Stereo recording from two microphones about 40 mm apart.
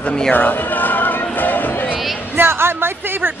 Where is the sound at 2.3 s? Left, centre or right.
Right.